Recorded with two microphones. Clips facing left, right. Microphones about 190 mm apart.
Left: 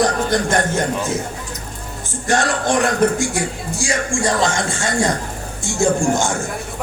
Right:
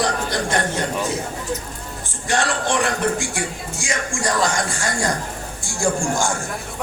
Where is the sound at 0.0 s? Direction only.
45° left (ahead or behind).